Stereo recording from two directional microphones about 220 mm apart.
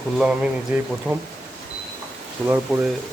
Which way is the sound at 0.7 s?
10° right (ahead or behind).